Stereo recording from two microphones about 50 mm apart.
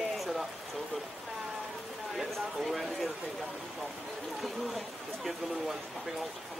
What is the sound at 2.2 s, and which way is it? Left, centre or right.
Speech, centre.